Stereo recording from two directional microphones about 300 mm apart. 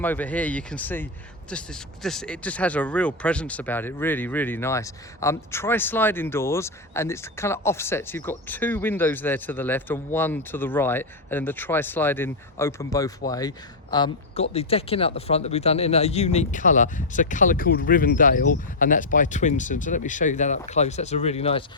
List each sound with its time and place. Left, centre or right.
0.0 s speech: centre